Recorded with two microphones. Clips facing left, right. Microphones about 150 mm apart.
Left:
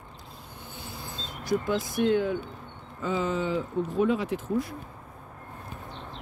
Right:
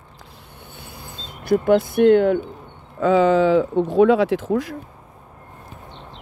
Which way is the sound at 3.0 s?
90° right.